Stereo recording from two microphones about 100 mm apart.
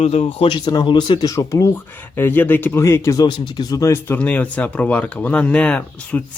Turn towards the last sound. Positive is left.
turn(degrees=10)  # may be behind; listen again after turning